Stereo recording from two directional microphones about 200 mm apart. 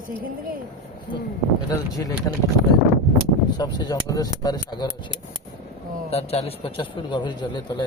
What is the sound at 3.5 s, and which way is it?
A man's voice, 20° left (ahead or behind).